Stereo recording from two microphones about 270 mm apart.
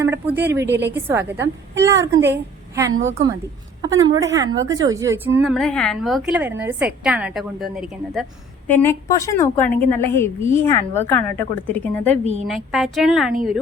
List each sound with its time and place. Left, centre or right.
0.0 s speech: centre
2.9 s a woman's voice: right
3.8 s speech: centre
4.4 s a woman's voice: right
4.7 s a woman's voice: centre
8.6 s a woman's voice: centre